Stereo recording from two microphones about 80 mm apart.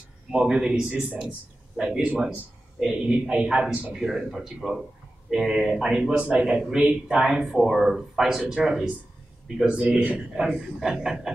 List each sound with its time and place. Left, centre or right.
0.3 s a man's voice: centre
7.2 s a man's voice: centre